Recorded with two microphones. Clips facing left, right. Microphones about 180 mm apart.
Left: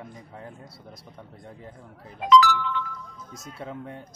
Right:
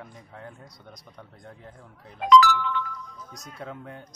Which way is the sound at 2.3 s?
50° right (ahead or behind).